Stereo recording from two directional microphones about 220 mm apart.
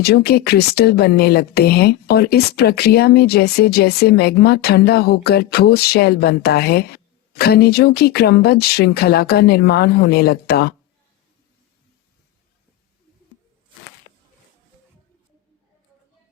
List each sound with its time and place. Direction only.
0.0 s a woman's voice: 45° left (ahead or behind)